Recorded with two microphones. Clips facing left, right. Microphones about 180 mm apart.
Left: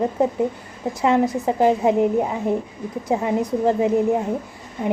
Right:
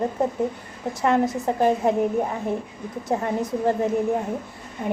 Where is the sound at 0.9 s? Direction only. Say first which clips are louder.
Left 2 dB; 15° left (ahead or behind).